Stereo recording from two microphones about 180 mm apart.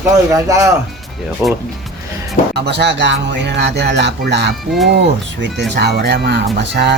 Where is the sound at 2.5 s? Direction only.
70° right (ahead or behind).